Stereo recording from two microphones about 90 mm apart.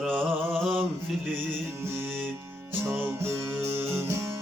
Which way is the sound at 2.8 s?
25° right (ahead or behind).